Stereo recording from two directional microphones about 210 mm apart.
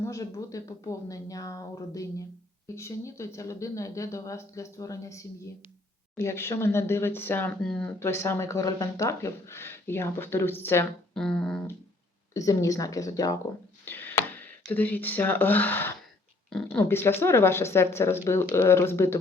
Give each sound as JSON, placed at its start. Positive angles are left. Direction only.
{"t": 0.0, "sound": "speech", "side_deg": 15}
{"t": 12.3, "sound": "speech", "side_deg": 15}